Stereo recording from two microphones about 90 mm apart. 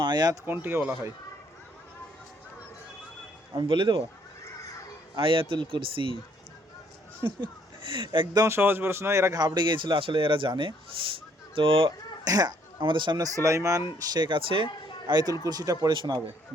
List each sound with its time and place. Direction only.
0.0 s speech: 55° right (ahead or behind)
0.4 s a man's voice: 25° right (ahead or behind)
3.5 s a man's voice: 60° right (ahead or behind)
5.1 s speech: 75° right (ahead or behind)
7.3 s speech: 70° right (ahead or behind)
8.4 s a man's voice: 25° right (ahead or behind)
9.3 s a man's voice: 55° right (ahead or behind)
11.5 s speech: 85° right
12.2 s speech: 45° right (ahead or behind)
12.8 s a man's voice: 65° right (ahead or behind)
13.1 s speech: 40° right (ahead or behind)
14.1 s speech: 60° right (ahead or behind); by 14.7 s 75° right (ahead or behind)
15.0 s speech: 50° right (ahead or behind)
15.9 s a man's voice: 55° right (ahead or behind)